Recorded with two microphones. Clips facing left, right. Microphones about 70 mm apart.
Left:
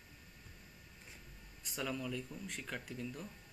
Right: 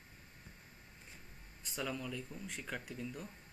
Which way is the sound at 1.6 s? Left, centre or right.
Centre.